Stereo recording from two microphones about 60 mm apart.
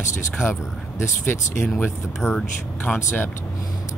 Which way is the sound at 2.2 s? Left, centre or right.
Centre.